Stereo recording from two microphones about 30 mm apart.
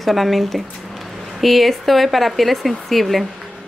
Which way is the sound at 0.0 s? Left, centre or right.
Centre.